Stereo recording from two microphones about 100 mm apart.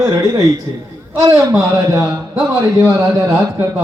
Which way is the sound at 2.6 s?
30° right (ahead or behind).